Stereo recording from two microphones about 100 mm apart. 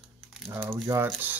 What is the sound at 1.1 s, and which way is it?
Speech, 15° right (ahead or behind).